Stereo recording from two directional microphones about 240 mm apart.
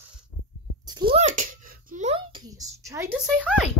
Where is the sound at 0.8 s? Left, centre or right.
Centre.